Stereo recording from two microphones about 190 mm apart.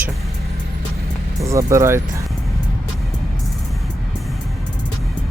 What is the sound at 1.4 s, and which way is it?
Speech, 15° right (ahead or behind).